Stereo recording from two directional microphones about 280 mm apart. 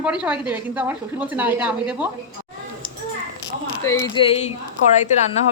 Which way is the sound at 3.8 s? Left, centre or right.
Centre.